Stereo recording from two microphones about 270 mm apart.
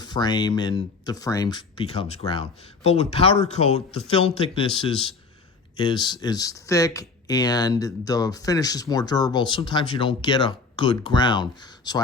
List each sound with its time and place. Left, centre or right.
0.0 s speech: centre